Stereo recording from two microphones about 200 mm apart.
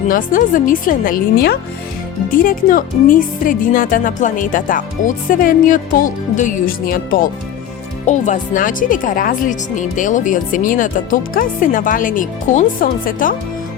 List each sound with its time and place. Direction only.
0.1 s speech: 45° left (ahead or behind)